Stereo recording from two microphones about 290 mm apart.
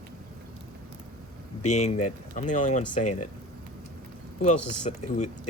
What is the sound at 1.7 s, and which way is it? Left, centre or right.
Speech, left.